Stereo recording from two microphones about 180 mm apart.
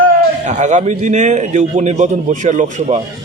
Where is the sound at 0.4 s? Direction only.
40° right (ahead or behind).